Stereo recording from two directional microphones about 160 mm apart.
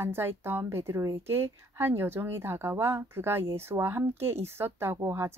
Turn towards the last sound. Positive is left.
turn(degrees=-15)  # may be behind; listen again after turning